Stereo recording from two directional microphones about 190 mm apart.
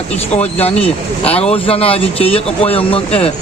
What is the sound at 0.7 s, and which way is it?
Speech, 5° left (ahead or behind).